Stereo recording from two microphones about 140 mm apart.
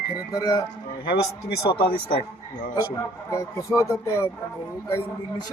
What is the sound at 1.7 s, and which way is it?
Speech, 40° left (ahead or behind).